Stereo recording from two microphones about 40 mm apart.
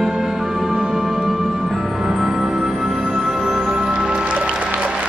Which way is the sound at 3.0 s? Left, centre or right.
Right.